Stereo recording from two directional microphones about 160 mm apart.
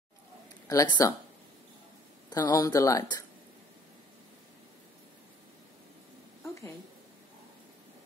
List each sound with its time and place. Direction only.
0.7 s speech: 25° left (ahead or behind)
2.2 s speech: 25° left (ahead or behind)
6.4 s a sound: 15° left (ahead or behind)